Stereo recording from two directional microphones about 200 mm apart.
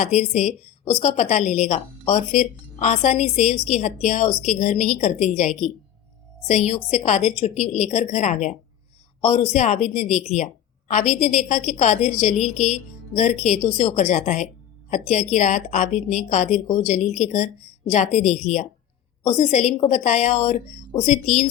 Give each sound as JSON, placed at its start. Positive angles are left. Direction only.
{"t": 0.0, "sound": "a woman's voice", "side_deg": 35}